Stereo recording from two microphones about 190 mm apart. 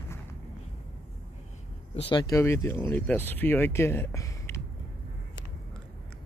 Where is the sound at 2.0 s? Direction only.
25° left (ahead or behind).